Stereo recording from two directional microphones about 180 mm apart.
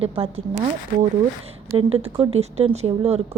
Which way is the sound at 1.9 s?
35° right (ahead or behind).